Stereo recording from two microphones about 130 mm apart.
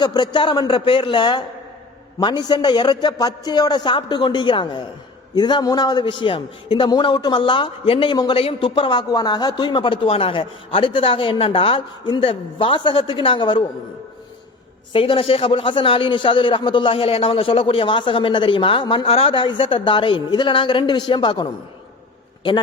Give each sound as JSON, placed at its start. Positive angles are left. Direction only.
{"t": 0.0, "sound": "a man's voice", "side_deg": 35}
{"t": 14.9, "sound": "a man's voice", "side_deg": 45}